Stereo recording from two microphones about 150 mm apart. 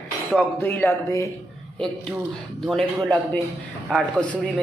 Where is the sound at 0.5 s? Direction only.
15° left (ahead or behind).